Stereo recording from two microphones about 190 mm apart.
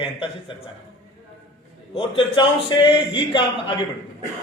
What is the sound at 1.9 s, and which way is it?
A man's voice, 25° left (ahead or behind).